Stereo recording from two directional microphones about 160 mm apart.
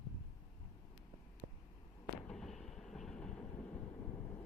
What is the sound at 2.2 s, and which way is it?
Vehicle, 5° left (ahead or behind).